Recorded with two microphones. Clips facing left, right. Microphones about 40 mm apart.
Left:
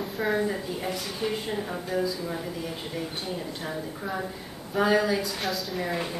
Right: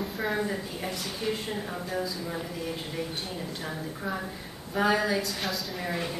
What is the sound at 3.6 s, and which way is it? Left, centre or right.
A woman's voice, centre.